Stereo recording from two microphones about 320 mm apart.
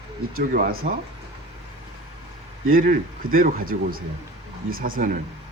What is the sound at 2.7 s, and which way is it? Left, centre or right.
A man's voice, right.